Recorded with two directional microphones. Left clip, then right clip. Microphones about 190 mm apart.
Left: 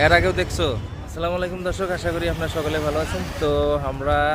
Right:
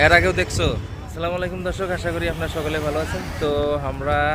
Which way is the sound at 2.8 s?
55° left (ahead or behind).